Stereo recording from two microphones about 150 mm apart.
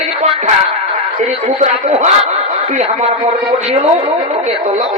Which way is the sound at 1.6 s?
50° right (ahead or behind).